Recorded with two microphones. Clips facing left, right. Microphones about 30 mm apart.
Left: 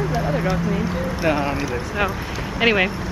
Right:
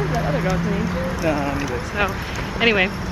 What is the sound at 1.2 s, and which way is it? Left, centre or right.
Speech, left.